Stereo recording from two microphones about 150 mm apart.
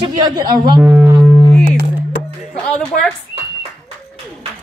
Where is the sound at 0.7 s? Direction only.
10° right (ahead or behind).